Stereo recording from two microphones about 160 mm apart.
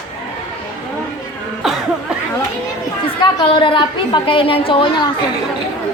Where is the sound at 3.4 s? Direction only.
30° left (ahead or behind).